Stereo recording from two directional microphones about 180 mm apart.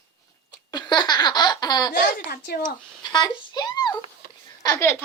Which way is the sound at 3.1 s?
25° left (ahead or behind).